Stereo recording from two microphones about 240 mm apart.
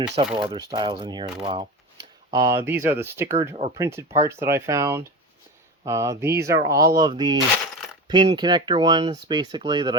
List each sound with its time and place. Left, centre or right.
0.4 s speech: centre